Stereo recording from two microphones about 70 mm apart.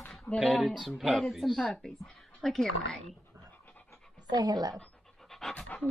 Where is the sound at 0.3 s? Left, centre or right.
Left.